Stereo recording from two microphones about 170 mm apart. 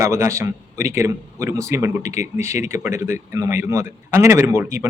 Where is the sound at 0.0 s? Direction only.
15° right (ahead or behind).